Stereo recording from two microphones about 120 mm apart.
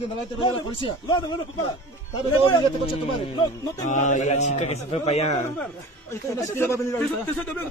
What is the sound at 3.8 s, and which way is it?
A man's voice, 90° left.